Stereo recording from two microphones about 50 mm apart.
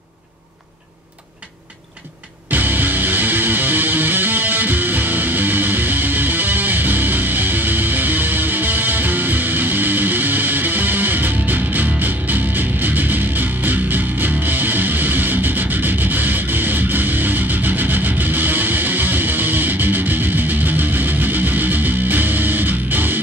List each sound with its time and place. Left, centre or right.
2.5 s music: right